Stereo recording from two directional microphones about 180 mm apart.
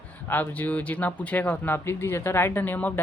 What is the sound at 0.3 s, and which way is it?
Speech, 10° left (ahead or behind).